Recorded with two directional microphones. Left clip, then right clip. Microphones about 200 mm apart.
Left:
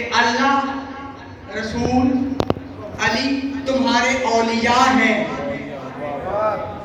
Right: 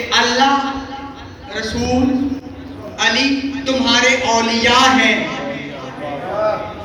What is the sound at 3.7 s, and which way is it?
Speech, 30° left (ahead or behind).